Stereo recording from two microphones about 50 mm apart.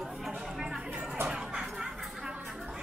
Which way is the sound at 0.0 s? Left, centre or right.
Centre.